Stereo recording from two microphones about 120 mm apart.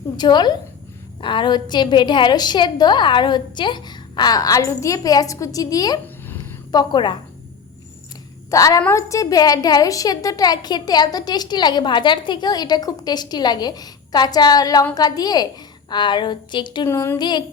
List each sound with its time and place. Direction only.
0.2 s a woman's voice: 35° left (ahead or behind)
8.4 s a woman's voice: 30° left (ahead or behind)
16.9 s a woman's voice: 20° left (ahead or behind)
17.2 s a woman's voice: 35° left (ahead or behind)